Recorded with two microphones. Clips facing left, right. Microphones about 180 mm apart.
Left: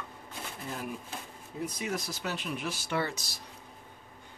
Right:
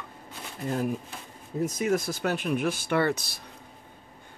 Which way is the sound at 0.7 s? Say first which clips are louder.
Right 10 dB; 45° right (ahead or behind).